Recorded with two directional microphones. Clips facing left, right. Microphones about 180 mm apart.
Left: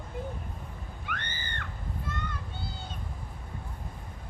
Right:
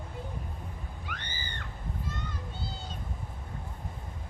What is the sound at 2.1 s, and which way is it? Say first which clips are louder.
Children playing: left 3 dB; 60° left (ahead or behind).